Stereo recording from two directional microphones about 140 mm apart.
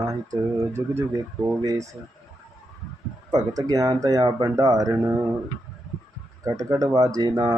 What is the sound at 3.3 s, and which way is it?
Speech, 25° right (ahead or behind).